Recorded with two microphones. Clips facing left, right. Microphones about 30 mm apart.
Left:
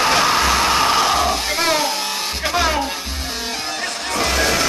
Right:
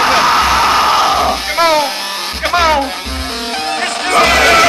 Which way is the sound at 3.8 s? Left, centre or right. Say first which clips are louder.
Right 11 dB; right.